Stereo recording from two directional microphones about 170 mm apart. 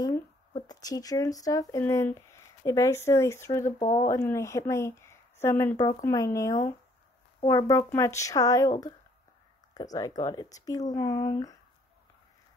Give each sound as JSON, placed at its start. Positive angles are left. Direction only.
{"t": 0.5, "sound": "speech", "side_deg": 25}